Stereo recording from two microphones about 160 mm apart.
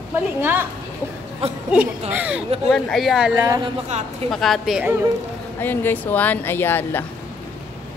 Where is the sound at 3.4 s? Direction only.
20° right (ahead or behind).